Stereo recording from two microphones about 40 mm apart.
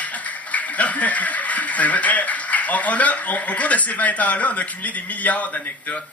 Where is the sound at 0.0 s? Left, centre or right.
Left.